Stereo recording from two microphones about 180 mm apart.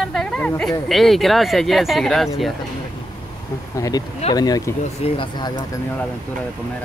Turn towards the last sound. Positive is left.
turn(degrees=35)  # may be behind; listen again after turning